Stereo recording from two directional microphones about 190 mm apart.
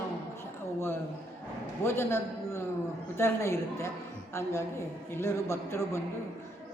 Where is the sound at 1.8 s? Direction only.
15° left (ahead or behind).